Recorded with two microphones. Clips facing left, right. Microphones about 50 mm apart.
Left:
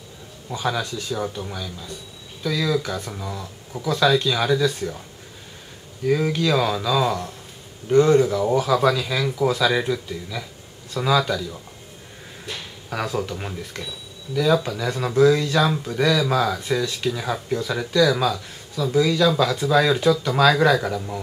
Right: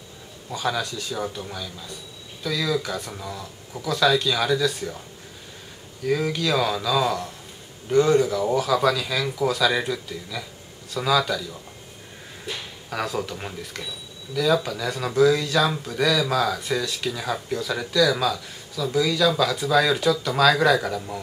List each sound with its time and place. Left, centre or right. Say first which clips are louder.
0.5 s speech: left 1 dB; centre
6.0 s speech: left 3 dB; centre